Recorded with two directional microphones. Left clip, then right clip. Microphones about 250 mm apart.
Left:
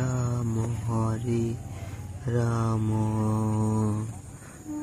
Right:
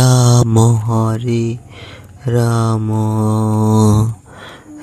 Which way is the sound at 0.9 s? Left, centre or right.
Right.